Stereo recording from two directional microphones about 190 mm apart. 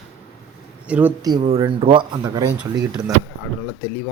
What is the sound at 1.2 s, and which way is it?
Speech, 25° right (ahead or behind).